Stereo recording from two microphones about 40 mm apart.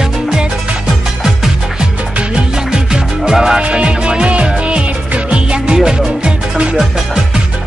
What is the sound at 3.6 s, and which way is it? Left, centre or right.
Music, right.